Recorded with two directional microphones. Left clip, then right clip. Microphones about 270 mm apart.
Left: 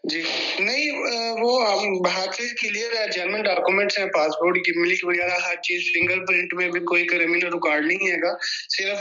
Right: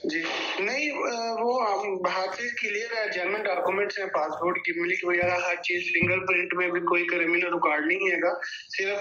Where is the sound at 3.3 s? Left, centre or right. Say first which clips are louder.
Left 8 dB; left.